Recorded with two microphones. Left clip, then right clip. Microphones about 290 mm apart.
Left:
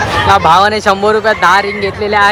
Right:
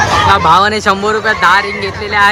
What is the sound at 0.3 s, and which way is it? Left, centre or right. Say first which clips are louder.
Speech: left 3 dB; centre.